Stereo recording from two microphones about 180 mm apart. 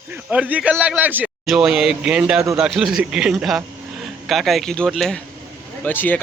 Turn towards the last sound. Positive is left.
turn(degrees=10)  # may be behind; listen again after turning